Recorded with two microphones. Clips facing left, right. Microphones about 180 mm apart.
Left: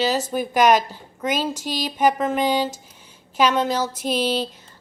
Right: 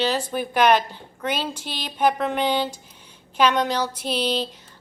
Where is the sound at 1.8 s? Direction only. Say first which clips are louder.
Left 1 dB; 10° left (ahead or behind).